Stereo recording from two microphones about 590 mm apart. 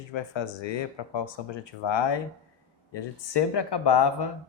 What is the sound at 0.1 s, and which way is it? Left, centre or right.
Speech, left.